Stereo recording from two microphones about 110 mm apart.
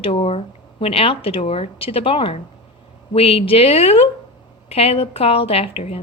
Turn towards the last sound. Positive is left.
turn(degrees=65)  # may be behind; listen again after turning